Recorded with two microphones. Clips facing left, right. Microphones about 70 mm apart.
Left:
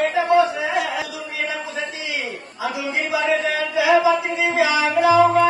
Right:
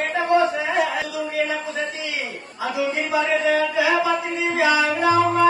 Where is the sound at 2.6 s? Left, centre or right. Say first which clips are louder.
Right 1 dB; right.